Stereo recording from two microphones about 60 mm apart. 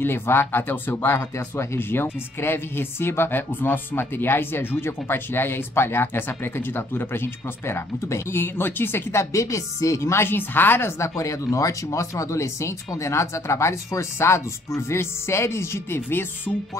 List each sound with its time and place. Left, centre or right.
0.0 s speech: left
11.0 s speech: left